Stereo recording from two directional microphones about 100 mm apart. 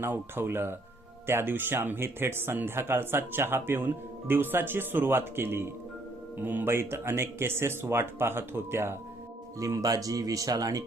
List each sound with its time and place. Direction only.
0.0 s speech: 20° right (ahead or behind); by 10.8 s 40° right (ahead or behind)